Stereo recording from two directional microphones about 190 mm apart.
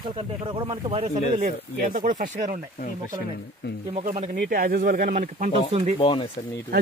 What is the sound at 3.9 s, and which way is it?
Speech, 40° right (ahead or behind).